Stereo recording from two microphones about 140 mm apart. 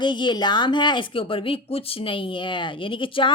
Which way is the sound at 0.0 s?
35° left (ahead or behind).